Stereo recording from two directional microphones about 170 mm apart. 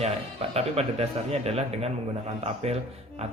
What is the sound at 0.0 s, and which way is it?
Speech, 35° right (ahead or behind).